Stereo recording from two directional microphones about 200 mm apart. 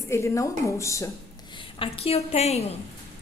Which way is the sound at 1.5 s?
25° left (ahead or behind).